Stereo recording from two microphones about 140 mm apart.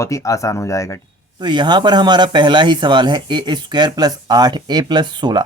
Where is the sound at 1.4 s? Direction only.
30° right (ahead or behind).